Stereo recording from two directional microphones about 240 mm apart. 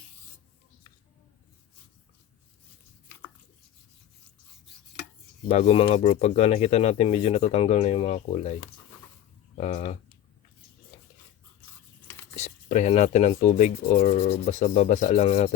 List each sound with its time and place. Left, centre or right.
5.5 s speech: left
9.6 s speech: left
12.4 s speech: left